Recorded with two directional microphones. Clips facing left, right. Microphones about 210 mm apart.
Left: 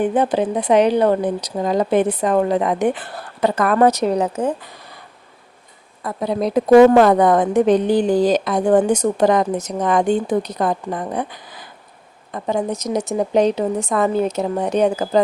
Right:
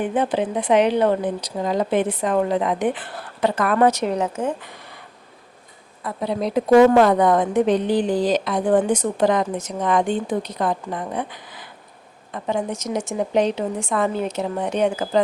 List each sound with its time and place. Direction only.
0.0 s speech: 40° left (ahead or behind)
6.0 s a woman's voice: 45° left (ahead or behind)